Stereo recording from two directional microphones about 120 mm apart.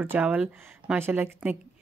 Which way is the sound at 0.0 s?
15° right (ahead or behind).